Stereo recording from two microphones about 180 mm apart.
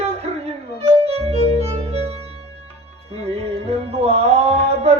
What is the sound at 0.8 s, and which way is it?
Violin, 35° right (ahead or behind).